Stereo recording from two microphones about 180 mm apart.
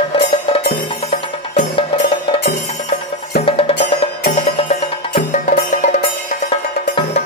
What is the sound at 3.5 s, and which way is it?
Music, 30° left (ahead or behind).